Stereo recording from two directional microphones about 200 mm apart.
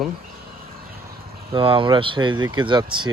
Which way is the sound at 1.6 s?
25° right (ahead or behind).